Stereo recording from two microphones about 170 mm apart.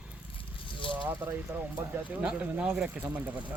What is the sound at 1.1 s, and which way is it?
Speech, 10° right (ahead or behind).